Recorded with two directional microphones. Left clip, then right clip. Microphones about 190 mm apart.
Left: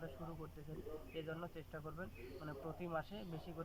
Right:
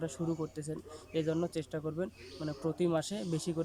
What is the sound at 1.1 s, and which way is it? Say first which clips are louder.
Speech: right 17 dB; 40° right (ahead or behind).